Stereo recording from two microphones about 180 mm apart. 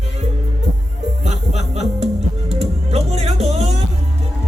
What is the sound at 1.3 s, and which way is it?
Music, 40° right (ahead or behind).